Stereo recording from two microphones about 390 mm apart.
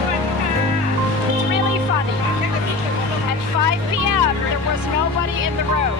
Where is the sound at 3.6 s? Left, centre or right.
Right.